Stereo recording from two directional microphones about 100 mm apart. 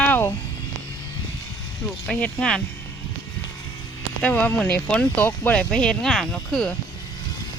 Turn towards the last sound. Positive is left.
turn(degrees=5)  # may be behind; listen again after turning